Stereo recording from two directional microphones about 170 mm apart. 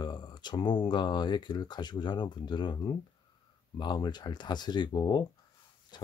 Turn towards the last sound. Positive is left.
turn(degrees=25)  # may be behind; listen again after turning